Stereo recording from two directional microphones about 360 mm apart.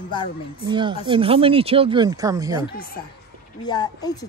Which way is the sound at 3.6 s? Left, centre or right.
Centre.